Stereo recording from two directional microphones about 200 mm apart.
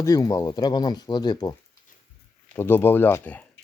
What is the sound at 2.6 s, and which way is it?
Speech, 10° left (ahead or behind).